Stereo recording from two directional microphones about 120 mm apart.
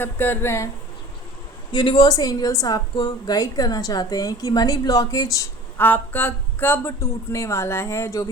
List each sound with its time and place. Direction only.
0.0 s speech: 15° left (ahead or behind)
1.7 s a woman's voice: 40° left (ahead or behind)
5.7 s speech: 15° left (ahead or behind)